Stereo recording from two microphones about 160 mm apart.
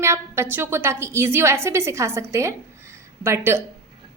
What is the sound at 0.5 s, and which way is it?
A woman's voice, 15° right (ahead or behind).